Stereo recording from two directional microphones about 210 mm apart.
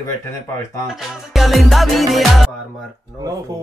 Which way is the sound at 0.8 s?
Centre (ahead or behind).